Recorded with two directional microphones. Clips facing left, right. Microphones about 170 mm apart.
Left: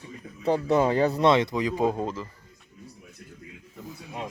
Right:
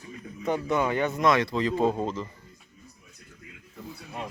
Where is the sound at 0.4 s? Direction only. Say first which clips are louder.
Left 4 dB; 35° left (ahead or behind); by 2.2 s 10° left (ahead or behind).